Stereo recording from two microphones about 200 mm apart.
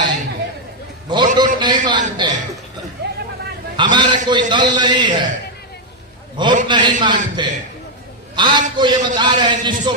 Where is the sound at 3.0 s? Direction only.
55° right (ahead or behind).